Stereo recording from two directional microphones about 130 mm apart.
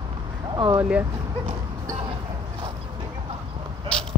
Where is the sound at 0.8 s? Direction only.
10° right (ahead or behind).